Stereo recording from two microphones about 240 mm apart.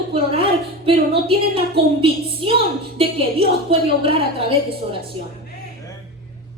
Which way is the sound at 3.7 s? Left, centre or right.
Right.